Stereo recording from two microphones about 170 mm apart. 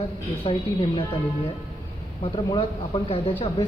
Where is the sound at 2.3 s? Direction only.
30° left (ahead or behind).